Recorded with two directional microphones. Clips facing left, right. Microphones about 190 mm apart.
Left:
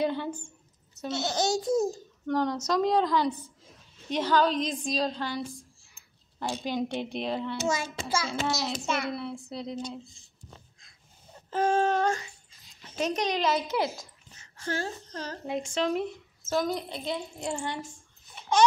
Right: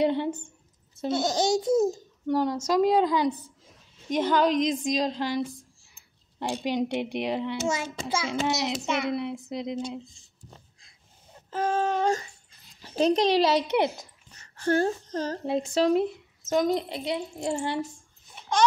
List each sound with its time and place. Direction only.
0.0 s a child's voice: 20° right (ahead or behind)
2.2 s a child's voice: 10° right (ahead or behind)
6.4 s a child's voice: 15° right (ahead or behind)
11.5 s a sound: 5° right (ahead or behind)
12.8 s a child's voice: 35° right (ahead or behind)
14.4 s speech: 60° right (ahead or behind); by 15.3 s 45° right (ahead or behind)
15.4 s a child's voice: 35° right (ahead or behind)
16.4 s a child's voice: 20° right (ahead or behind)